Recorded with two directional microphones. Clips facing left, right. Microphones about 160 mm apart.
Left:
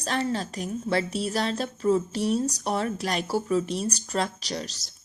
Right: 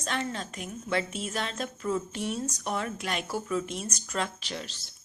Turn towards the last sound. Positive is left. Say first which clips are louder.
# left 5 dB
turn(degrees=40)  # may be behind; listen again after turning